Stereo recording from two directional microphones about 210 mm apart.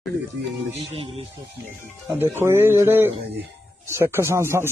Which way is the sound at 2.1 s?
10° right (ahead or behind).